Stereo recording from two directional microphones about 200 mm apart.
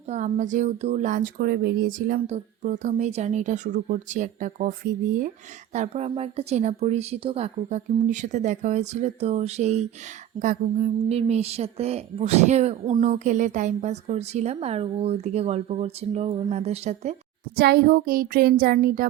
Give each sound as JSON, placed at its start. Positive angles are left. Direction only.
{"t": 0.1, "sound": "a woman's voice", "side_deg": -35}
{"t": 5.7, "sound": "a woman's voice", "side_deg": -35}
{"t": 17.6, "sound": "a sound", "side_deg": -50}